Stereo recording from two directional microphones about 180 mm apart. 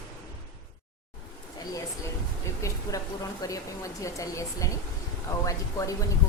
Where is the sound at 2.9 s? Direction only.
20° left (ahead or behind).